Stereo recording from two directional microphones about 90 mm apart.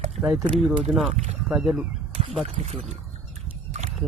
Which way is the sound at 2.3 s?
5° left (ahead or behind).